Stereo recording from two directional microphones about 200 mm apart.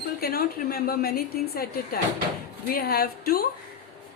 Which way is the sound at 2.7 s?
50° left (ahead or behind).